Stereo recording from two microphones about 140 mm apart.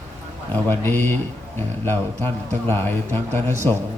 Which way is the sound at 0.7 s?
15° left (ahead or behind).